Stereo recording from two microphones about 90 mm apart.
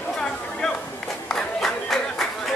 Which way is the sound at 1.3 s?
5° left (ahead or behind).